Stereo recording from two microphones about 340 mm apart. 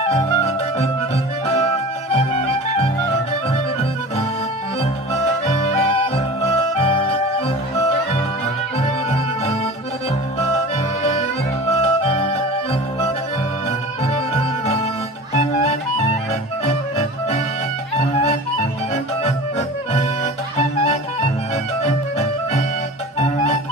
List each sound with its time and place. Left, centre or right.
0.0 s music: centre
2.1 s music: centre
5.5 s music: centre
8.7 s music: centre
11.0 s music: centre
13.7 s music: centre
20.5 s music: centre